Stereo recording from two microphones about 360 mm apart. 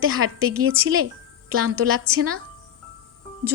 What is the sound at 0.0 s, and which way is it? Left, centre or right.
Speech, right.